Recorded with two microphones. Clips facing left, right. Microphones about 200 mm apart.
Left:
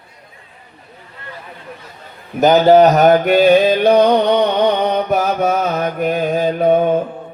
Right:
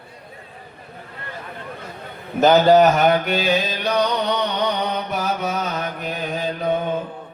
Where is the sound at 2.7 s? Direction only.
40° left (ahead or behind); by 7.0 s 55° left (ahead or behind).